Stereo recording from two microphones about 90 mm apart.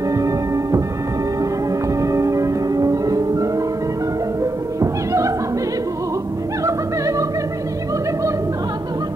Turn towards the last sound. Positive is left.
turn(degrees=-35)  # may be behind; listen again after turning